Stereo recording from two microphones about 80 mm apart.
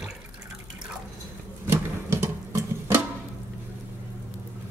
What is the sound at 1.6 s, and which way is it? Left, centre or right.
Music, right.